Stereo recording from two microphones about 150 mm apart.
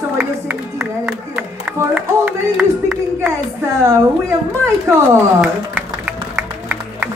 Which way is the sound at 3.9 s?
15° right (ahead or behind).